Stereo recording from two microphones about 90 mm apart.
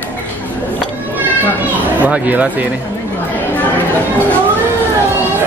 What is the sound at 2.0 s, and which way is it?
Speech, 15° right (ahead or behind).